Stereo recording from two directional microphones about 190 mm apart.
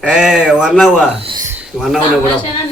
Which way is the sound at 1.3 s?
20° right (ahead or behind).